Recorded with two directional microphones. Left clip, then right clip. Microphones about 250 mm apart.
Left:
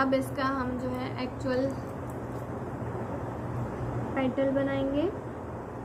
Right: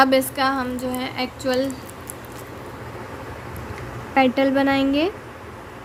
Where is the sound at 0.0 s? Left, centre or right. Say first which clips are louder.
Right 10 dB; right.